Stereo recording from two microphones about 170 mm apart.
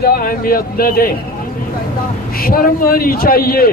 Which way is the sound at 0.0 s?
60° left (ahead or behind).